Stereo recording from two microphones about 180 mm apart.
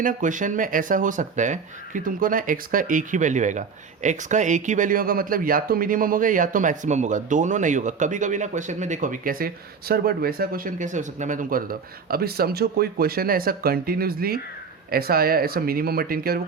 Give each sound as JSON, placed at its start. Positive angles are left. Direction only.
{"t": 0.0, "sound": "speech", "side_deg": -45}